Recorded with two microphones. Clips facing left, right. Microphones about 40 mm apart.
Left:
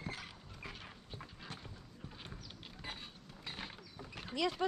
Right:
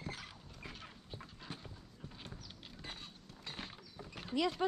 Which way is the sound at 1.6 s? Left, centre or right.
Centre.